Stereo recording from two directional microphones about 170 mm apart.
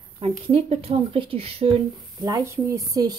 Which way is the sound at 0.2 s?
35° right (ahead or behind).